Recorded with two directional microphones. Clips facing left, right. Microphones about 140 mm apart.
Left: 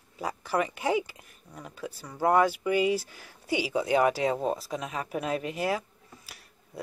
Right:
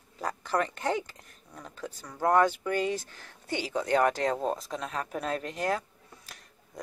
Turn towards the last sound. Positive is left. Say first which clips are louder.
# left 2 dB
turn(degrees=5)  # may be behind; listen again after turning